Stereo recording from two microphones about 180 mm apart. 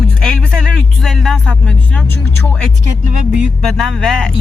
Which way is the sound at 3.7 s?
5° left (ahead or behind).